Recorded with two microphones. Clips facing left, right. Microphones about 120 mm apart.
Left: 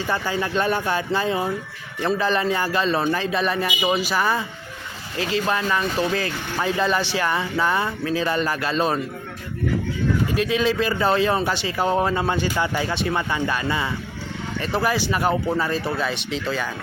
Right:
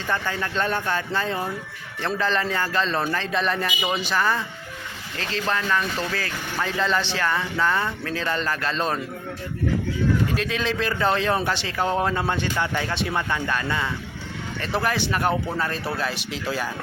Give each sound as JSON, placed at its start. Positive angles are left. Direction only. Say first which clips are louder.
{"t": 0.1, "sound": "speech", "louder": "left 2 dB", "side_deg": 10}
{"t": 10.3, "sound": "speech", "louder": "left 5 dB", "side_deg": 5}